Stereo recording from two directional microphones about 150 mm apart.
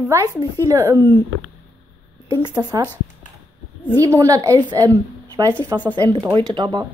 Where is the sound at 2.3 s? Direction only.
25° right (ahead or behind).